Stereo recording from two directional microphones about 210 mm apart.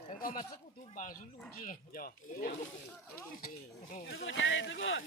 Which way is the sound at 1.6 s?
40° left (ahead or behind).